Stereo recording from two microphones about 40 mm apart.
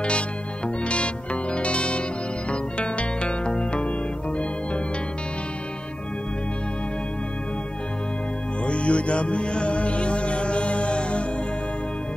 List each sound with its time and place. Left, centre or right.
0.8 s music: left
8.6 s music: left